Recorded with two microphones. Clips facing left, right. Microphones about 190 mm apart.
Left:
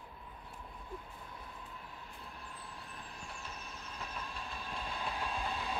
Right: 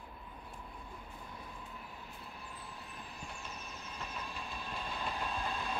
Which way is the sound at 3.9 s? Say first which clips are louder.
Even; centre (ahead or behind).